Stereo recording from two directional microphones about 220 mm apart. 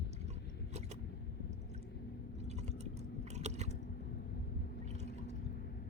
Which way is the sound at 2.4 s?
30° right (ahead or behind).